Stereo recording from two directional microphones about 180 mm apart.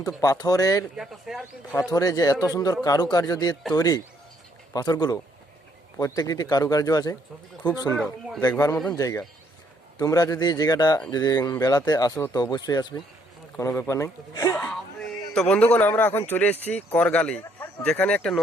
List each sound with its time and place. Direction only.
0.2 s speech: 20° left (ahead or behind)
0.9 s speech: centre (ahead or behind)
1.7 s speech: 20° left (ahead or behind)
7.9 s speech: centre (ahead or behind)
8.4 s speech: 15° left (ahead or behind)